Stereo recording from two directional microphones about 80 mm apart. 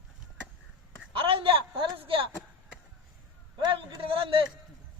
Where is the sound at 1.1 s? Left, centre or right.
Right.